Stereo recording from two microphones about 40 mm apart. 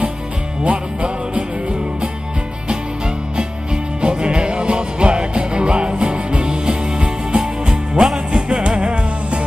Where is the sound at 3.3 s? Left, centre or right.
Right.